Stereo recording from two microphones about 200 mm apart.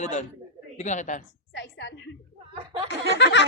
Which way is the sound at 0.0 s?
35° left (ahead or behind).